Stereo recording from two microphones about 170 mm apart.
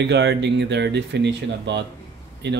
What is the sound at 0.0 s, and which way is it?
Speech, 90° right.